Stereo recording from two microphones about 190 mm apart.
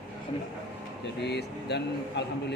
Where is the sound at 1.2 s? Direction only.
60° left (ahead or behind).